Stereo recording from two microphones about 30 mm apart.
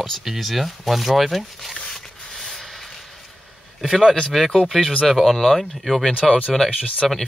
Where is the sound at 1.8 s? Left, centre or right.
Centre.